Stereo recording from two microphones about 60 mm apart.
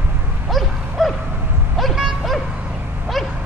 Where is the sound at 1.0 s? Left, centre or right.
Centre.